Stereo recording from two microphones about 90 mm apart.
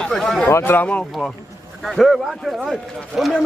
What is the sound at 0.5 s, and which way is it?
Speech, 30° left (ahead or behind).